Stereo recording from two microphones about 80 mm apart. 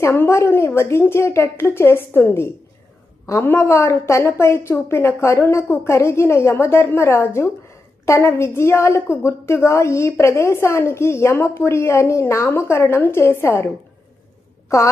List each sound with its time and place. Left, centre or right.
0.0 s a woman's voice: left
14.7 s a woman's voice: left